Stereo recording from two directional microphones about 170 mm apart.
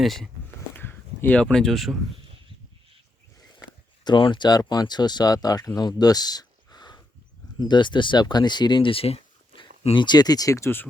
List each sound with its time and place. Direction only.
0.0 s speech: centre (ahead or behind)
0.7 s speech: 10° left (ahead or behind)
4.0 s speech: 25° left (ahead or behind)